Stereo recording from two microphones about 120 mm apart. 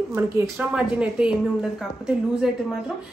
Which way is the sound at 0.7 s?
5° right (ahead or behind).